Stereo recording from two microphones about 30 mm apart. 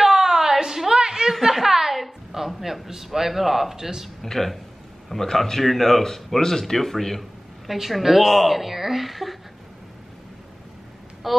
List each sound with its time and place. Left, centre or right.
0.0 s a sound: centre
1.5 s a sound: centre
2.9 s a man's voice: centre
3.7 s speech: right
4.2 s speech: centre
7.6 s a woman's voice: centre
11.2 s a woman's voice: centre